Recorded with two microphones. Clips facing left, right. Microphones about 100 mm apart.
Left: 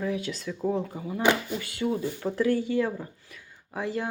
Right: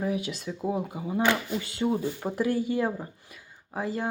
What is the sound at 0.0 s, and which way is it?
Speech, 15° right (ahead or behind).